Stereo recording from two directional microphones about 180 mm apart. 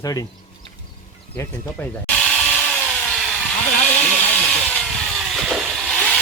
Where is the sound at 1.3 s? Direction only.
15° left (ahead or behind).